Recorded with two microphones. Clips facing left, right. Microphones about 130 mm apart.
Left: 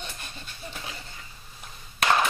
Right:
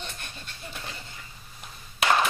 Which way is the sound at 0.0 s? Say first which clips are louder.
Even; 5° left (ahead or behind).